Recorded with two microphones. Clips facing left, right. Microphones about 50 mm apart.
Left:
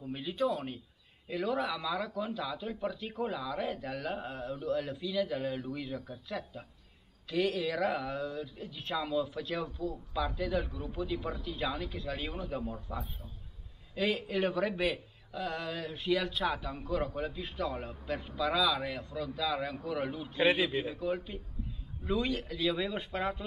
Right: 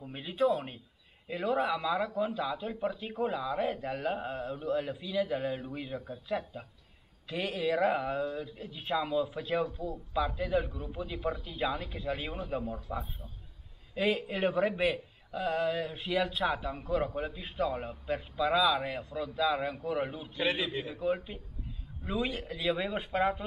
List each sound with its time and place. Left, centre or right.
0.0 s a man's voice: centre
14.2 s a man's voice: centre
20.0 s a man's voice: centre
20.3 s a man's voice: centre
20.9 s a man's voice: centre